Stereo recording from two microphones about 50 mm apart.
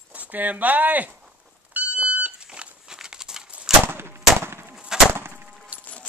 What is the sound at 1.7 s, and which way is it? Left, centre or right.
Smoke detector, right.